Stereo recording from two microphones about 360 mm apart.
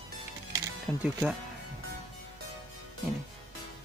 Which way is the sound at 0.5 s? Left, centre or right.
Centre.